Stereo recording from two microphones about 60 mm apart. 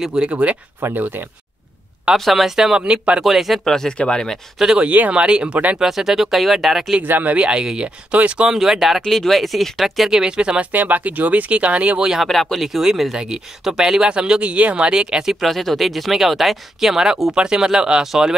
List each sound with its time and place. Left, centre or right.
0.0 s speech: centre
0.3 s speech: right
0.9 s speech: right
2.1 s speech: centre
2.8 s speech: centre
3.3 s speech: centre
4.6 s speech: centre
4.8 s speech: right
5.8 s speech: centre
7.0 s speech: right
8.5 s speech: centre
10.7 s speech: right
12.3 s speech: centre
15.4 s speech: centre